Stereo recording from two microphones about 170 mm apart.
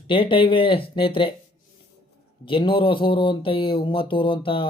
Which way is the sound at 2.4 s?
30° left (ahead or behind).